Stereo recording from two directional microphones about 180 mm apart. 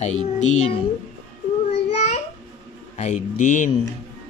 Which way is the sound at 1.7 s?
35° left (ahead or behind).